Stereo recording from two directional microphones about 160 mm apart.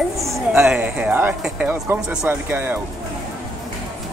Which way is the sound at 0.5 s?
5° right (ahead or behind).